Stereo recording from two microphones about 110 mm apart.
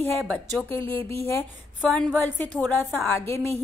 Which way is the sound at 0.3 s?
15° left (ahead or behind).